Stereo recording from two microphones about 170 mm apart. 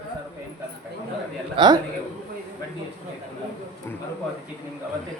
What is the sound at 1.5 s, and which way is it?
Speech, 25° right (ahead or behind).